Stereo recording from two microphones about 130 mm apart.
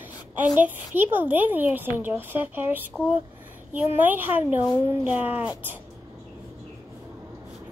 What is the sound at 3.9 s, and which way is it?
A woman's voice, 15° right (ahead or behind).